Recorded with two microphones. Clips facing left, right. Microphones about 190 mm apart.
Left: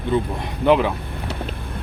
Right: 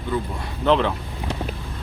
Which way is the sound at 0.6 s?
10° left (ahead or behind).